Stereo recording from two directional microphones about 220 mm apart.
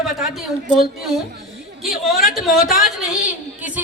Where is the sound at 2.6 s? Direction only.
35° left (ahead or behind).